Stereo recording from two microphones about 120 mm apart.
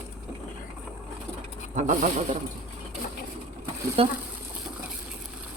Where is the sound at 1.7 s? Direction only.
90° right.